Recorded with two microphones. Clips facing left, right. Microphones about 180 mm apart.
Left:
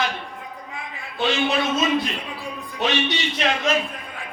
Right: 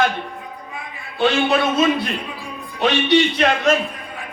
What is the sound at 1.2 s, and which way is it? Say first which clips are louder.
Speech: right 5 dB; 50° right (ahead or behind).